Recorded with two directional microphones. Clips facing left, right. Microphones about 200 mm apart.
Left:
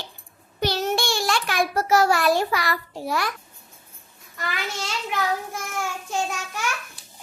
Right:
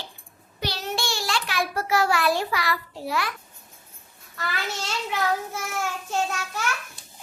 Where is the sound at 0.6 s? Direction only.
45° left (ahead or behind).